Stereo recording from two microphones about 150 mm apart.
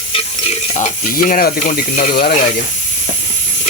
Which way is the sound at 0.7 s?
50° left (ahead or behind).